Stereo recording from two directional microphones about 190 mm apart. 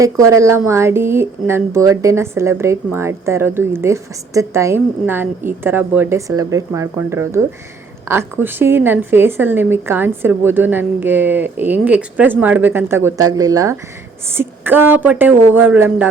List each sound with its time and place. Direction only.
0.0 s speech: 15° right (ahead or behind)